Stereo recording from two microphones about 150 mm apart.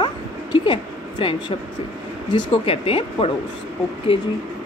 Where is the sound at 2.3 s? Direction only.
35° left (ahead or behind).